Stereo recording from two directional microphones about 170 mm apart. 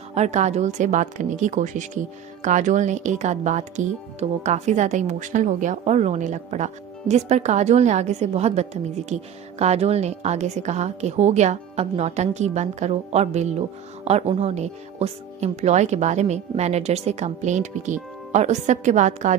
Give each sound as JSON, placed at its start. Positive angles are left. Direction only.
{"t": 0.1, "sound": "a woman's voice", "side_deg": -40}